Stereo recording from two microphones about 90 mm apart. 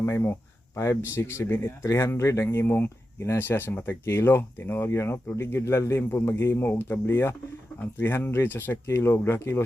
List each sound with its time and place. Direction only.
0.0 s speech: 25° left (ahead or behind)